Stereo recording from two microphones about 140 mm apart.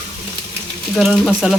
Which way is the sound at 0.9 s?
5° right (ahead or behind).